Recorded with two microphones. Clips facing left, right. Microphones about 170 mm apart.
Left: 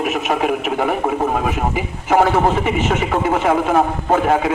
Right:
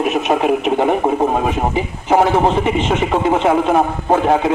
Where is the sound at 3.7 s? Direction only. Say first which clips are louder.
Right 1 dB; 10° right (ahead or behind).